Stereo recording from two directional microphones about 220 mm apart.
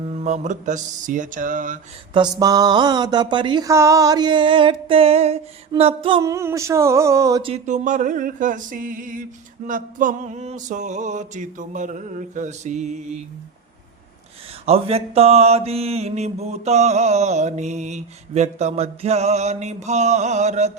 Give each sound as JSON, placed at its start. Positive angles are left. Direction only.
{"t": 0.0, "sound": "mantra", "side_deg": -30}
{"t": 2.1, "sound": "mantra", "side_deg": -20}
{"t": 7.5, "sound": "mantra", "side_deg": -35}
{"t": 14.6, "sound": "mantra", "side_deg": -25}